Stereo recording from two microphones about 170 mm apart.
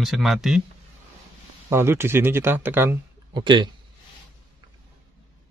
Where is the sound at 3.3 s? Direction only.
25° right (ahead or behind).